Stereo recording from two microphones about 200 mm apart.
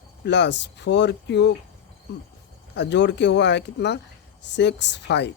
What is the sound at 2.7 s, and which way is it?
Speech, 60° left (ahead or behind).